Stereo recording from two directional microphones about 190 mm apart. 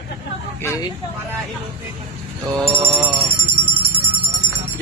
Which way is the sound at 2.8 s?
25° right (ahead or behind).